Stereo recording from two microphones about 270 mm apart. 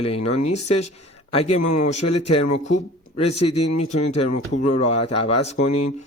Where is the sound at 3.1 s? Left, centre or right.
Left.